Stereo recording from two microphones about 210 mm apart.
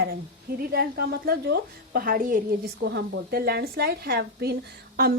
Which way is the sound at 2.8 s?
55° right (ahead or behind).